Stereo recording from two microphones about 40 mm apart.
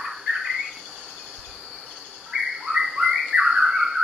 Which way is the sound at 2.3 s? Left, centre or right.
Centre.